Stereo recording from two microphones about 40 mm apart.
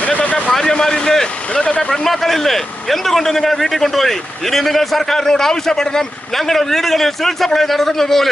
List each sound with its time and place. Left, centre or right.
0.0 s a sound: left
0.5 s vehicle: centre
1.6 s speech: left
1.9 s a man's voice: centre